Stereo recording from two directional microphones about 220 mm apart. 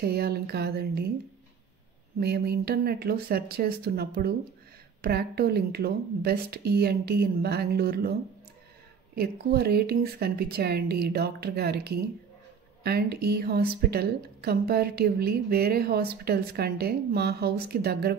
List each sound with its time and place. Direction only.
0.0 s a woman's voice: 45° right (ahead or behind)
2.1 s a woman's voice: 45° right (ahead or behind)
9.1 s a woman's voice: 45° right (ahead or behind)